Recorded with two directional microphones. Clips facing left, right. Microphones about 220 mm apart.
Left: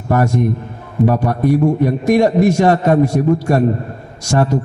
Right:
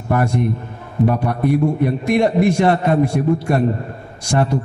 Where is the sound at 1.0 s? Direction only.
40° left (ahead or behind).